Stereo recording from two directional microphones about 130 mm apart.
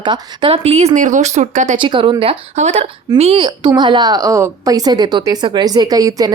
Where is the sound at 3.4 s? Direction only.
35° right (ahead or behind).